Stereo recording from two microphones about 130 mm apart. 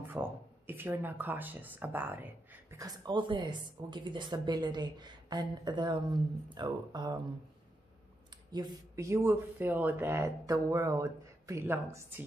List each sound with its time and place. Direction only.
0.1 s speech: 15° right (ahead or behind)
3.1 s a woman's voice: 40° right (ahead or behind)
8.5 s speech: 35° right (ahead or behind)